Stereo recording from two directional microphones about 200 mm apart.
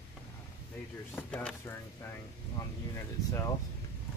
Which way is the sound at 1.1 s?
10° left (ahead or behind).